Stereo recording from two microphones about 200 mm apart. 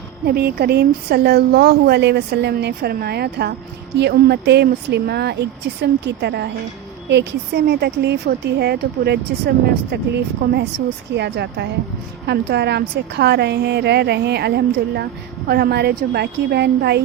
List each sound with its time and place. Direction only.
0.3 s a woman's voice: 50° right (ahead or behind)